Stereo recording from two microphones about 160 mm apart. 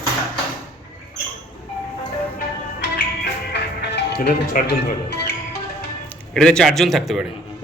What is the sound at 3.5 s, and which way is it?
Music, 85° left.